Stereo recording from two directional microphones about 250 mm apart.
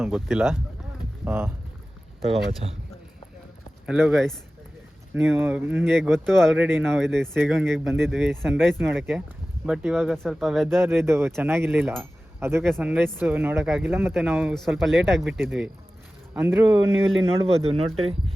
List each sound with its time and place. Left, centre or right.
0.0 s speech: centre
2.6 s speech: right
3.8 s speech: centre
17.7 s speech: right